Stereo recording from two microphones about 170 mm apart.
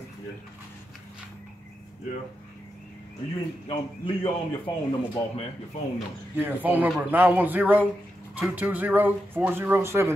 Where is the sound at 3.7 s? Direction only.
30° left (ahead or behind).